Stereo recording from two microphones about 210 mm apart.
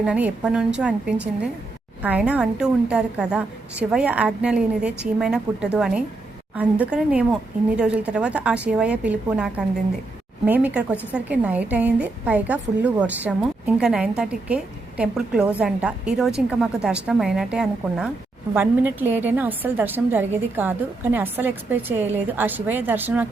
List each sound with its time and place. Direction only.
0.0 s a woman's voice: 5° right (ahead or behind)